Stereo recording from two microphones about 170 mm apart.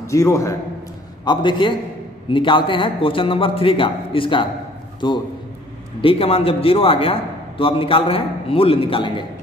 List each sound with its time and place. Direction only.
0.0 s a man's voice: 20° left (ahead or behind)
5.9 s a man's voice: 35° left (ahead or behind)